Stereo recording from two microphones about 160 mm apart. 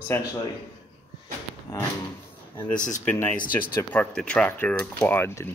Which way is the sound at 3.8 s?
10° left (ahead or behind).